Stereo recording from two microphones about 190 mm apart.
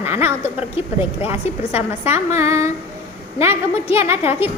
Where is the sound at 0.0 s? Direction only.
10° right (ahead or behind).